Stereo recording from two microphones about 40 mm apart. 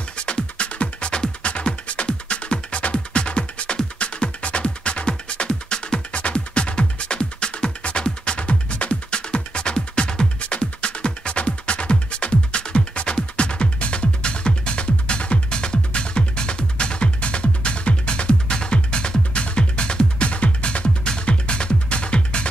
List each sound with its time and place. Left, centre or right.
0.2 s music: left